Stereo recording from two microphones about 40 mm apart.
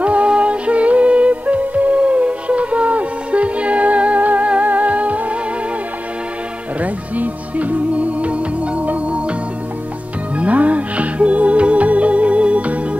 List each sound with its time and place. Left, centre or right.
0.0 s music: right
6.8 s music: right
10.3 s music: right